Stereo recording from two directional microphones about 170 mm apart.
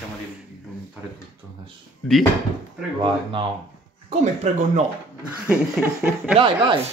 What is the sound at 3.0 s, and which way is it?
Speech, 30° right (ahead or behind).